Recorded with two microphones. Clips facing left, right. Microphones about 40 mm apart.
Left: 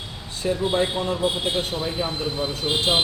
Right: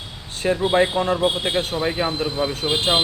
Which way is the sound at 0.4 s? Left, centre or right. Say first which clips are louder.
Right 4 dB; right.